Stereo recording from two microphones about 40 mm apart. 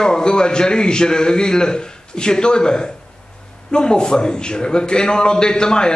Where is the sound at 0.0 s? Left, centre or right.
Centre.